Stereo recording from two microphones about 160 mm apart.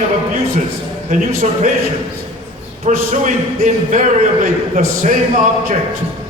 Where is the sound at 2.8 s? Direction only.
50° right (ahead or behind).